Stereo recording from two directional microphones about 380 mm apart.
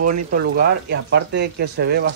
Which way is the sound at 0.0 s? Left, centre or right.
Right.